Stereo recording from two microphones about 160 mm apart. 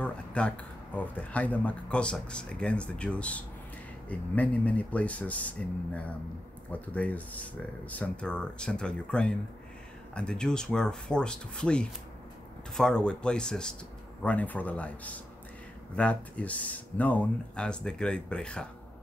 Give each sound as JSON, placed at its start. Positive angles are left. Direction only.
{"t": 0.0, "sound": "speech", "side_deg": 5}